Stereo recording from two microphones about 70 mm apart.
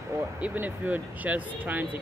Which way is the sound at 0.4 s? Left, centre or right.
Right.